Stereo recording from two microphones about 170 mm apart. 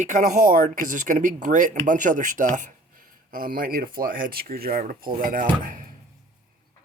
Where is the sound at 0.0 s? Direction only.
50° right (ahead or behind).